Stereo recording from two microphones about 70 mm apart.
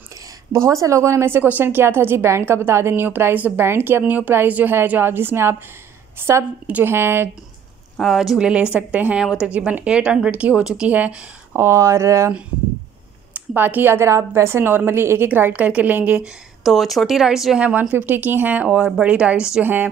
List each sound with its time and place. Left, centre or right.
0.5 s a woman's voice: right
8.0 s a woman's voice: centre
10.9 s speech: right
11.5 s speech: right
13.6 s a woman's voice: right
15.2 s speech: right
16.6 s speech: centre
17.6 s a woman's voice: centre
19.6 s speech: right